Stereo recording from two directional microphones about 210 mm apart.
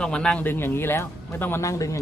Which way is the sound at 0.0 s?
5° left (ahead or behind).